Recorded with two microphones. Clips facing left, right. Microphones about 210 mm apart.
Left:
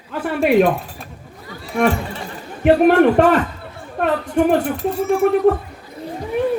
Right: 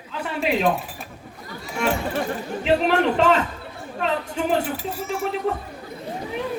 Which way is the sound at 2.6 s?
55° left (ahead or behind).